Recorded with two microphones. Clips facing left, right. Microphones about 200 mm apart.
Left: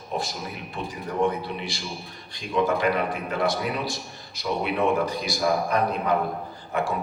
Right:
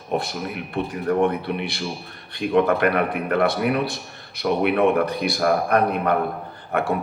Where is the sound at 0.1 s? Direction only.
60° right (ahead or behind).